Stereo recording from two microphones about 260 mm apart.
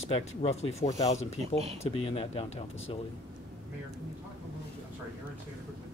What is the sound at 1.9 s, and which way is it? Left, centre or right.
Speech, left.